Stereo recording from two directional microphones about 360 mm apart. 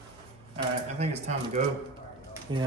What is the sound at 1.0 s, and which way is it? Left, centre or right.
A man's voice, centre.